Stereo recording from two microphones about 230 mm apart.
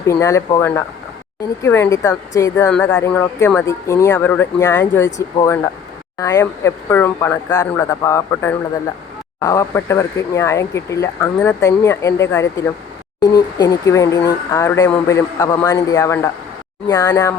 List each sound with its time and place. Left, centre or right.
0.1 s speech: centre